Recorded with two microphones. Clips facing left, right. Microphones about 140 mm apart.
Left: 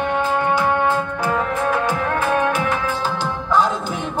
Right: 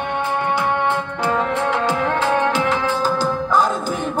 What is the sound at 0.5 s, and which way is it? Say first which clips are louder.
Music: left 1 dB; 65° right (ahead or behind).